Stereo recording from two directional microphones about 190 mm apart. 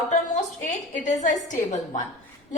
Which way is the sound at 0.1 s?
40° left (ahead or behind).